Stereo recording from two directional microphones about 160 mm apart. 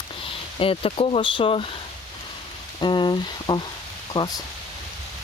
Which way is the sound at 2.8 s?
30° left (ahead or behind).